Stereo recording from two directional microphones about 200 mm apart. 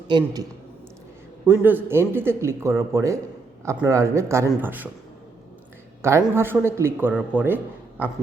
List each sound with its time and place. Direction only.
0.1 s a man's voice: 25° right (ahead or behind)
1.5 s a man's voice: 10° right (ahead or behind)
6.2 s a man's voice: 10° right (ahead or behind)